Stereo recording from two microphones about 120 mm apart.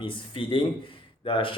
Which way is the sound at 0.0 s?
45° left (ahead or behind).